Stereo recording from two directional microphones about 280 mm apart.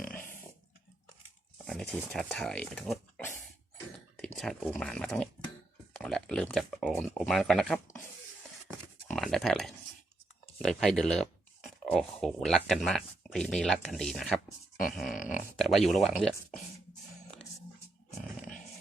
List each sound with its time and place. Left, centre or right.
1.6 s speech: centre
9.0 s speech: centre
15.1 s speech: left
15.5 s speech: centre